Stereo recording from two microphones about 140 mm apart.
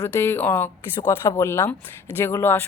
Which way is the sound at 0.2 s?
15° left (ahead or behind).